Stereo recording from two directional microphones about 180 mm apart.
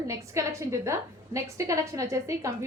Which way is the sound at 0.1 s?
15° right (ahead or behind).